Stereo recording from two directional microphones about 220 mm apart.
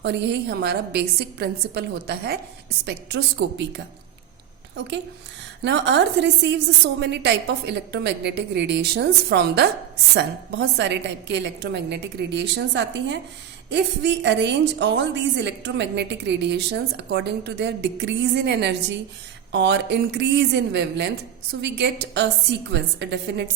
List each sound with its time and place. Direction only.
0.0 s a woman's voice: 50° right (ahead or behind)
5.6 s a woman's voice: 55° right (ahead or behind)